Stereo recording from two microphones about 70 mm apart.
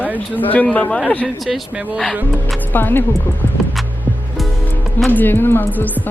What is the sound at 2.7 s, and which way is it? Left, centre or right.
Speech, left.